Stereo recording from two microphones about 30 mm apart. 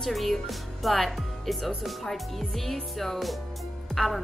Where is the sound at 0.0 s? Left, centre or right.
Centre.